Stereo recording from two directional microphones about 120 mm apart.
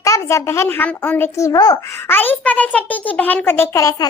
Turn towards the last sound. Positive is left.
turn(degrees=25)  # may be behind; listen again after turning